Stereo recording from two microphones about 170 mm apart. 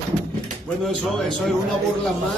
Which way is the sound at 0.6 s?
Centre (ahead or behind).